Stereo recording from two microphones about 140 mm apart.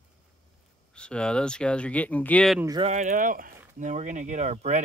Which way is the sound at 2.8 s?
55° right (ahead or behind).